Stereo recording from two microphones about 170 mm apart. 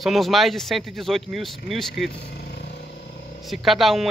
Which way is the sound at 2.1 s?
80° left.